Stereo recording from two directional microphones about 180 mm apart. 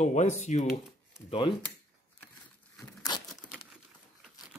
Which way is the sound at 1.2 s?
30° left (ahead or behind).